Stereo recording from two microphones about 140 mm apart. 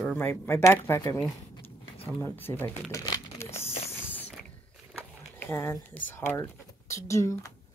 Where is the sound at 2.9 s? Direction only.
20° left (ahead or behind).